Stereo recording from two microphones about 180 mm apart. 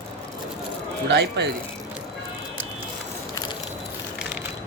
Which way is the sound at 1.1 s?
70° right (ahead or behind).